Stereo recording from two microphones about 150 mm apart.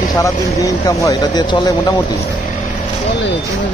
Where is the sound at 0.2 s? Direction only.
20° left (ahead or behind).